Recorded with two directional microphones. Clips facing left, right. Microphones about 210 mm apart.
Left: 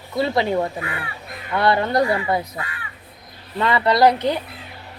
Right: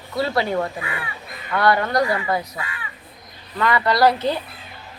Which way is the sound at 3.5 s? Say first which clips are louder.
Left 1 dB; 25° left (ahead or behind).